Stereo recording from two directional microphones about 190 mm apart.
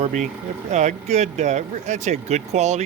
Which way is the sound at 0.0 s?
40° right (ahead or behind).